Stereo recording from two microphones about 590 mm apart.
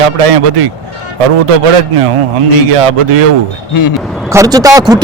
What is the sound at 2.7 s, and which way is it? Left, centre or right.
Speech, right.